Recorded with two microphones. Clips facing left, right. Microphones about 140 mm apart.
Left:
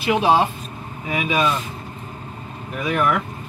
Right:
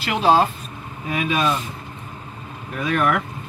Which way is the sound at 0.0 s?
15° left (ahead or behind).